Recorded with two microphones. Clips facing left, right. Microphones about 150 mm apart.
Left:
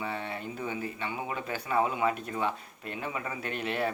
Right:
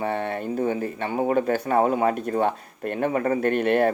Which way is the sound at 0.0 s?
55° right (ahead or behind).